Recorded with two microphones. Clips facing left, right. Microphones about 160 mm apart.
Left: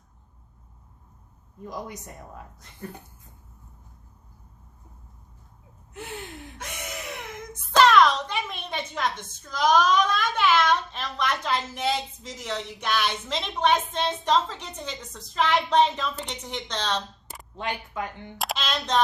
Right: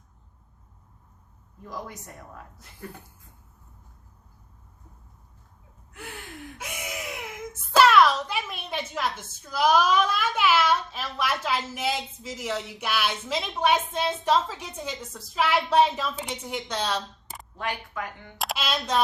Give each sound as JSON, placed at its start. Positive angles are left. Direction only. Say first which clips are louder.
{"t": 1.6, "sound": "speech", "louder": "left 2 dB", "side_deg": 20}
{"t": 6.6, "sound": "a child's voice", "louder": "right 1 dB", "side_deg": -10}
{"t": 17.6, "sound": "speech", "louder": "left 1 dB", "side_deg": 25}
{"t": 18.3, "sound": "speech", "louder": "even", "side_deg": -5}